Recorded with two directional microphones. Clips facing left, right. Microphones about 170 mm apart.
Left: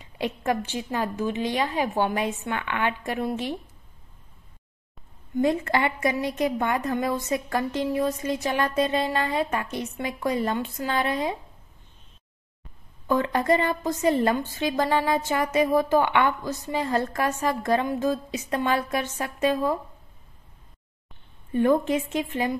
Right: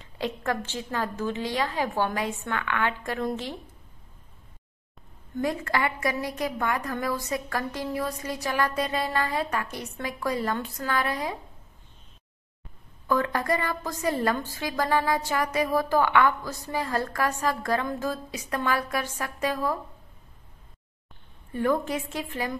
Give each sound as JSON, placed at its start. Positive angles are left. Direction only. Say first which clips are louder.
{"t": 0.0, "sound": "a woman's voice", "louder": "left 2 dB", "side_deg": 15}
{"t": 5.3, "sound": "a woman's voice", "louder": "left 5 dB", "side_deg": 25}
{"t": 13.1, "sound": "a woman's voice", "louder": "left 3 dB", "side_deg": 20}
{"t": 21.5, "sound": "a woman's voice", "louder": "left 5 dB", "side_deg": 20}